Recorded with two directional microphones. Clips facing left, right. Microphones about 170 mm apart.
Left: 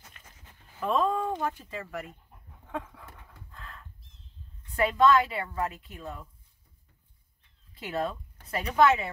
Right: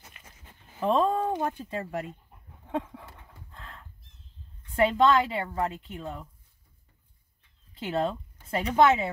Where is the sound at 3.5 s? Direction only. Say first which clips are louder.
Right 1 dB; 25° right (ahead or behind).